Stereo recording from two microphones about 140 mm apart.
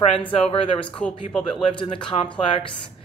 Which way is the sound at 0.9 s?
10° left (ahead or behind).